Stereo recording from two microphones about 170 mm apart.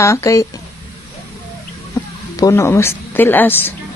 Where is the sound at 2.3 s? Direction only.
20° left (ahead or behind).